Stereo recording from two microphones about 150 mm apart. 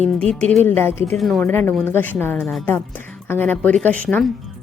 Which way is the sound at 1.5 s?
15° left (ahead or behind).